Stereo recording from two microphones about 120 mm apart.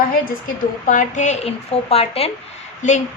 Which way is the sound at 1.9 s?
55° left (ahead or behind).